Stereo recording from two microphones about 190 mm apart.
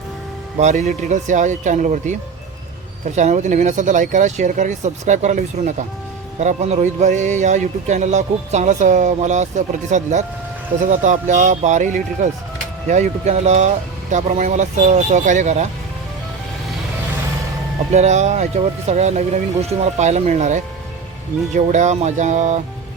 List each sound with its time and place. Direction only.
0.6 s speech: 40° right (ahead or behind)
3.2 s speech: 40° right (ahead or behind)
17.9 s speech: 35° right (ahead or behind)